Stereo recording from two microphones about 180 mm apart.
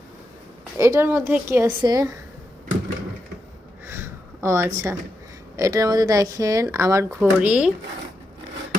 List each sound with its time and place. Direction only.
0.8 s a woman's voice: 15° right (ahead or behind)
3.8 s a sound: 15° right (ahead or behind)
5.5 s speech: 20° right (ahead or behind)
7.2 s speech: 5° right (ahead or behind)